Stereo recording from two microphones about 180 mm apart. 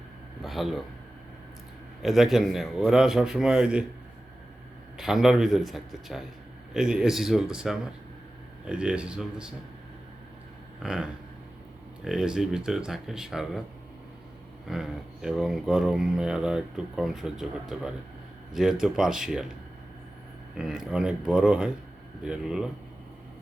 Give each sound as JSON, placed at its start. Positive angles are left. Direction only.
{"t": 0.4, "sound": "speech", "side_deg": 0}
{"t": 2.0, "sound": "speech", "side_deg": 0}
{"t": 4.9, "sound": "speech", "side_deg": 0}
{"t": 10.8, "sound": "speech", "side_deg": -5}
{"t": 14.7, "sound": "speech", "side_deg": 0}
{"t": 20.6, "sound": "speech", "side_deg": -5}